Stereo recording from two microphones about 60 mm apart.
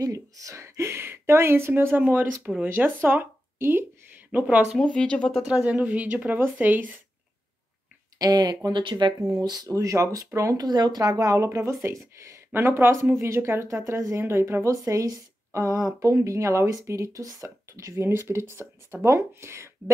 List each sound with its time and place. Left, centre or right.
0.0 s a woman's voice: right
4.3 s speech: right
4.7 s speech: centre
5.5 s speech: right
8.2 s speech: right
9.3 s speech: right
11.4 s a woman's voice: right
12.5 s speech: right
13.2 s speech: right
14.5 s a woman's voice: right
17.2 s speech: right
17.7 s speech: right